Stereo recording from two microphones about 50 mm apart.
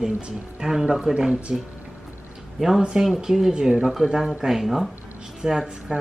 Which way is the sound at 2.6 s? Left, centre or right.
Centre.